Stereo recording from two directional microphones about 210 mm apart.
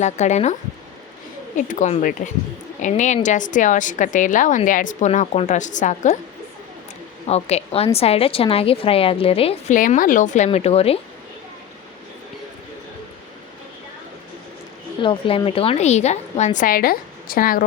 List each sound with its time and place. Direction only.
0.0 s a woman's voice: 35° left (ahead or behind)
1.5 s a woman's voice: 35° left (ahead or behind)
7.3 s a woman's voice: 30° left (ahead or behind)
15.0 s a woman's voice: 25° left (ahead or behind); by 17.6 s 45° left (ahead or behind)